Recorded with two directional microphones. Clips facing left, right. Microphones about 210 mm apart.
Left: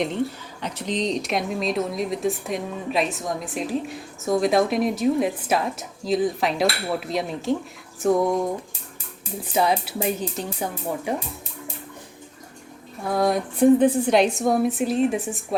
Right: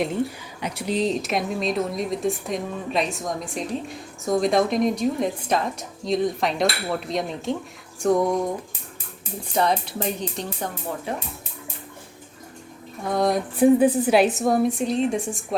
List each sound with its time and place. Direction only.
0.6 s a woman's voice: 10° right (ahead or behind)
9.5 s speech: 5° left (ahead or behind)
13.1 s a woman's voice: 5° left (ahead or behind)